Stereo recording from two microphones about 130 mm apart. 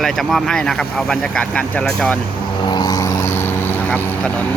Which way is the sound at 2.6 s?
35° left (ahead or behind).